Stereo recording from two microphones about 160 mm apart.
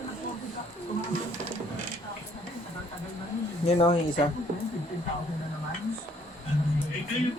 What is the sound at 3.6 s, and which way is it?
Speech, 35° left (ahead or behind).